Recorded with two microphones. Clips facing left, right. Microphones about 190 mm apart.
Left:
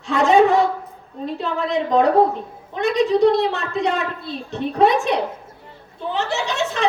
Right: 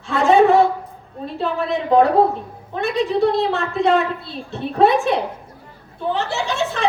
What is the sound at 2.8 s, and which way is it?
A woman's voice, 15° left (ahead or behind).